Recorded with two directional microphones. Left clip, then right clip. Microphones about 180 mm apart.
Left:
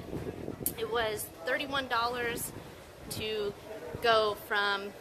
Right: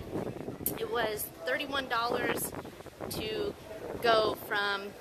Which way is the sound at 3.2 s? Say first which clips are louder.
Left 1 dB; 10° left (ahead or behind).